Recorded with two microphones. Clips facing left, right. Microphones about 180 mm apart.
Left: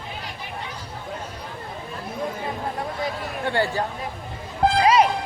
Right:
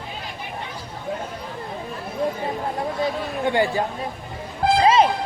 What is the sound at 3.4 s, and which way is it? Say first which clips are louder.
Speech: right 3 dB; 15° right (ahead or behind).